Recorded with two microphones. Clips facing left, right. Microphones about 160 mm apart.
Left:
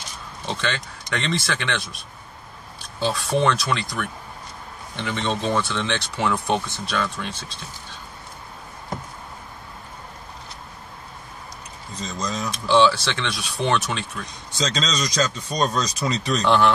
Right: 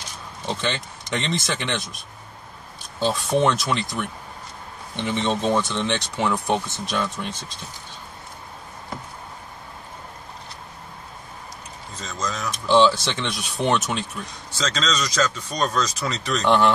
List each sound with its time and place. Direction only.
0.5 s speech: 15° right (ahead or behind)
3.0 s speech: 20° right (ahead or behind)
12.0 s speech: 15° left (ahead or behind)
12.7 s speech: 20° right (ahead or behind)
14.6 s speech: 15° left (ahead or behind)
16.4 s speech: 15° right (ahead or behind)